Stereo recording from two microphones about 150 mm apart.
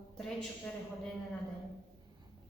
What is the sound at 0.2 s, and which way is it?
Speech, 5° left (ahead or behind).